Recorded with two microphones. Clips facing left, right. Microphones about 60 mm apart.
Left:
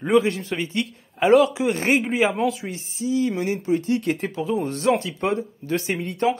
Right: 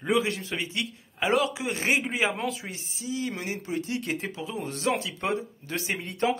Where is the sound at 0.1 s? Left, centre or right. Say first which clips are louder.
Left 6 dB; left.